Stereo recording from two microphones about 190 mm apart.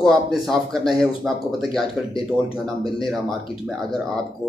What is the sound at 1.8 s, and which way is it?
Speech, 25° left (ahead or behind).